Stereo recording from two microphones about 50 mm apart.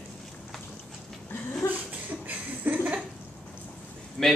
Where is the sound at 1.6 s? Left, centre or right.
Left.